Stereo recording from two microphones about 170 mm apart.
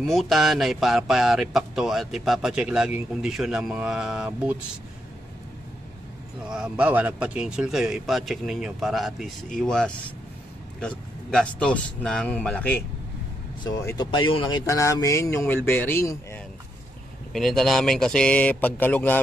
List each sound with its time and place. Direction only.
0.0 s speech: centre (ahead or behind)
6.4 s speech: 5° right (ahead or behind)
13.7 s speech: 20° left (ahead or behind)
14.7 s speech: 20° left (ahead or behind)
17.3 s speech: centre (ahead or behind)